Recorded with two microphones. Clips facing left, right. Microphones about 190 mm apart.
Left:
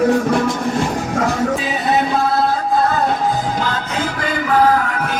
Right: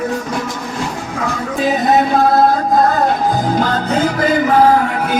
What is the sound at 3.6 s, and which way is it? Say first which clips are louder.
Music: right 6 dB; 45° right (ahead or behind).